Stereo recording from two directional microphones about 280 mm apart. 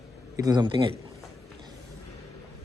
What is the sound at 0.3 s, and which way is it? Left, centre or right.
Speech, centre.